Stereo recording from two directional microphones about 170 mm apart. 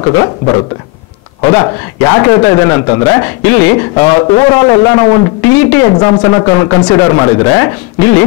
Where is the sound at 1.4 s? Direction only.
15° left (ahead or behind).